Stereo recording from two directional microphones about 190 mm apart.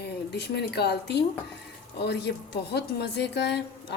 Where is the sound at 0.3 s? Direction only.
60° left (ahead or behind).